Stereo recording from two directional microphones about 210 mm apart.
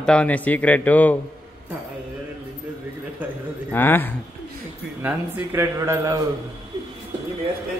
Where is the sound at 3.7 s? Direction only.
10° left (ahead or behind).